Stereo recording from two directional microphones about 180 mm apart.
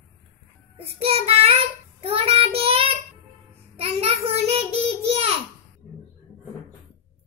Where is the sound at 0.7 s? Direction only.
35° right (ahead or behind).